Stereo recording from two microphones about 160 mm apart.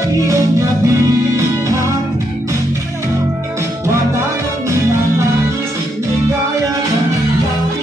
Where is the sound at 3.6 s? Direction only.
15° right (ahead or behind).